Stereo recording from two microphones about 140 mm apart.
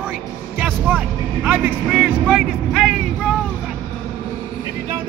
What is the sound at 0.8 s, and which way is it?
Speech, 10° right (ahead or behind).